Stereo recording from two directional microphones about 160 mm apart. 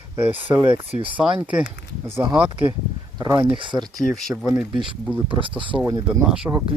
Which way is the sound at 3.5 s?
30° right (ahead or behind).